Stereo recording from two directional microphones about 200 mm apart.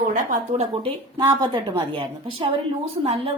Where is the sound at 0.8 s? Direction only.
20° right (ahead or behind).